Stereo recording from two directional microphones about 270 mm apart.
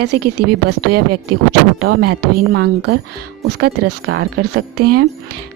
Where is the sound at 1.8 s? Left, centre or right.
Right.